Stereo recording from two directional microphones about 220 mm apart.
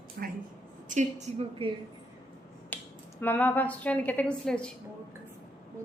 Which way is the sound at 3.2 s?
10° left (ahead or behind).